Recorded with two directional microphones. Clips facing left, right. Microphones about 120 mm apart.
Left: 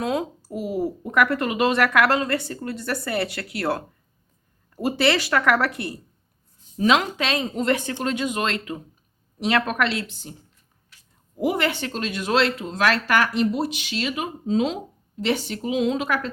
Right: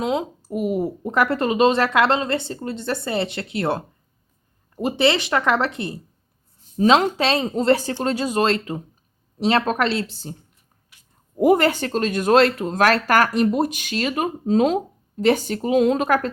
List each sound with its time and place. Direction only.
0.0 s a woman's voice: 20° right (ahead or behind)
11.3 s speech: 45° right (ahead or behind)